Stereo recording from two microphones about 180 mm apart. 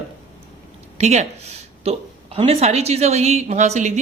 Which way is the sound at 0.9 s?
40° right (ahead or behind).